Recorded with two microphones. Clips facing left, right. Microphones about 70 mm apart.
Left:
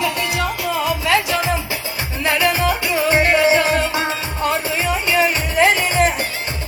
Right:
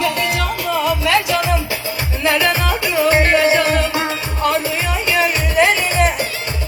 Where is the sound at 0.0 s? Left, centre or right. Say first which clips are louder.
Right 2 dB; left.